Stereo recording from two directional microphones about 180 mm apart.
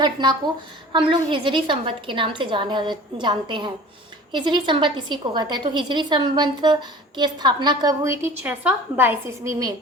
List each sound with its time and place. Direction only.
0.0 s a woman's voice: 25° right (ahead or behind)